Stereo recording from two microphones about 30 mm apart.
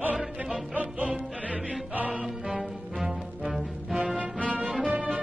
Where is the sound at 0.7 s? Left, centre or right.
Right.